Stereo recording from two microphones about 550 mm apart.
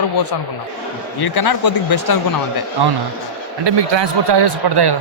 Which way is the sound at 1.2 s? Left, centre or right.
Left.